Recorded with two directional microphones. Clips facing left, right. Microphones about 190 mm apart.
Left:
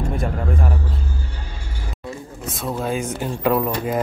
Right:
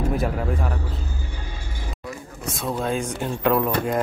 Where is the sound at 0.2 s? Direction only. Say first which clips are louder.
Even; centre (ahead or behind).